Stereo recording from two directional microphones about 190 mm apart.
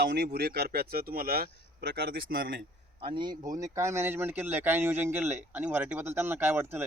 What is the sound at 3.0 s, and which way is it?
A man's voice, 25° right (ahead or behind).